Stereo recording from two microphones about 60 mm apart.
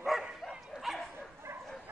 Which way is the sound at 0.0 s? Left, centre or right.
Centre.